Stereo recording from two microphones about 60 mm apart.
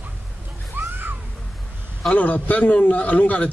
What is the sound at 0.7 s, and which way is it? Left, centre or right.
Children playing, right.